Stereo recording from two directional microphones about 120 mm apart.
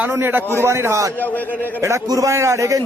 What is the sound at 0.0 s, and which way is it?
A man's voice, 15° right (ahead or behind).